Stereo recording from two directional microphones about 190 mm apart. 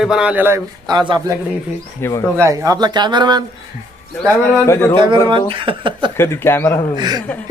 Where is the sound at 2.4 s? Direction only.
15° right (ahead or behind).